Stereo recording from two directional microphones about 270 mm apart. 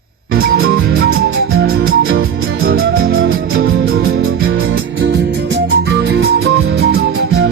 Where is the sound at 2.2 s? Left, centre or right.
Right.